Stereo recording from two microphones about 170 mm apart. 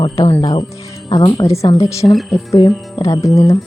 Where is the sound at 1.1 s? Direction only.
20° left (ahead or behind).